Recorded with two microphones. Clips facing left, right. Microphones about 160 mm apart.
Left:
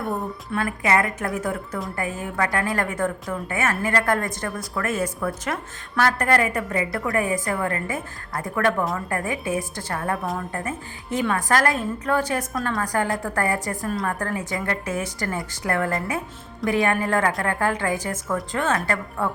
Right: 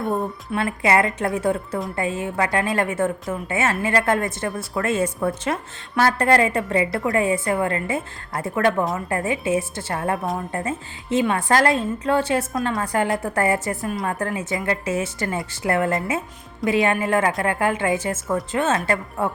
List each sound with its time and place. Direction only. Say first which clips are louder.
0.1 s a woman's voice: right 3 dB; 25° right (ahead or behind)